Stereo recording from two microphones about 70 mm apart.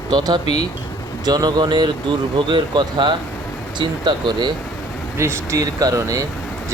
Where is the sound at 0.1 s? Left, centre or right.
Right.